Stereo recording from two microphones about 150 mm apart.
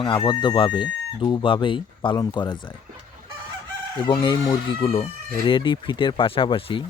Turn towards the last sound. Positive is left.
turn(degrees=35)  # may be behind; listen again after turning